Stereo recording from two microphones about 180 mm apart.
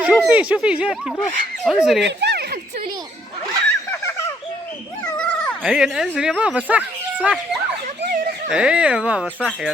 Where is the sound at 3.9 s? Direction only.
15° left (ahead or behind).